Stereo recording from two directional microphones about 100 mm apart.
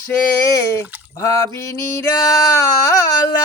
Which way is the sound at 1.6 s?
30° left (ahead or behind).